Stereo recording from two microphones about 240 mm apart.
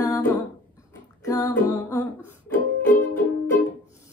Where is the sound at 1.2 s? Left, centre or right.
Centre.